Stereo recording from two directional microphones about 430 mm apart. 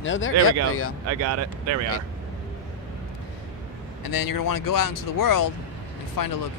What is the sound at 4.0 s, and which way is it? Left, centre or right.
Speech, left.